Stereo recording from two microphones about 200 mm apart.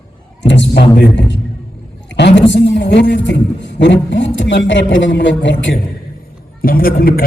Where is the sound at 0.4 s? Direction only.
65° left (ahead or behind).